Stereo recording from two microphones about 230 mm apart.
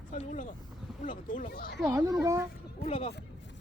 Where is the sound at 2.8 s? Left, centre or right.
Left.